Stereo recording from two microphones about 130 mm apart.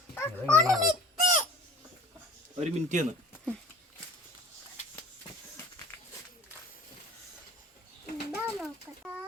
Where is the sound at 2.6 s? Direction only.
60° right (ahead or behind).